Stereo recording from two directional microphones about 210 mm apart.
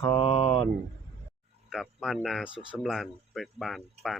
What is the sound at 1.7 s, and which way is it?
Speech, centre (ahead or behind).